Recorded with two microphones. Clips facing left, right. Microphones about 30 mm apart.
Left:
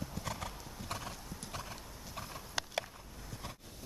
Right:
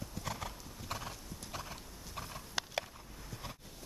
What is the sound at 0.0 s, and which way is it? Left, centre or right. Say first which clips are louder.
Clip-clop: left 1 dB; centre.